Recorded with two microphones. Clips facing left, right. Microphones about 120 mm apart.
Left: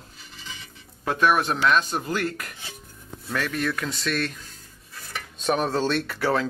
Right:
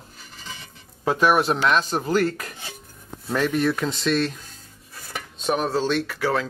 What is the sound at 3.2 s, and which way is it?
Speech, 25° right (ahead or behind).